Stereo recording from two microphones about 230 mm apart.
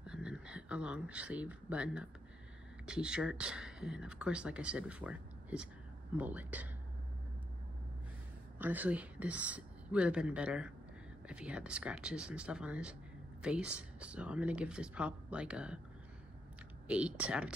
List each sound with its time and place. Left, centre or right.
0.0 s speech: centre
8.5 s speech: centre
16.8 s speech: centre